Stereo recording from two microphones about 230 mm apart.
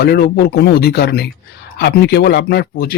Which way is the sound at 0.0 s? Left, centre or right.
Left.